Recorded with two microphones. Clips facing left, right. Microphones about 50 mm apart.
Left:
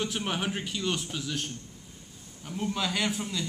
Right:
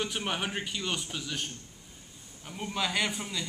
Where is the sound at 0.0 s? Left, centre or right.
Centre.